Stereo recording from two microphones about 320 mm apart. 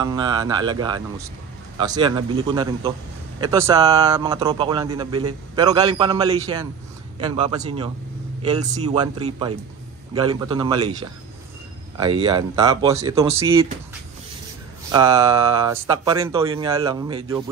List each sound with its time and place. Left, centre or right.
0.0 s a man's voice: centre
12.3 s a man's voice: centre
14.9 s a man's voice: centre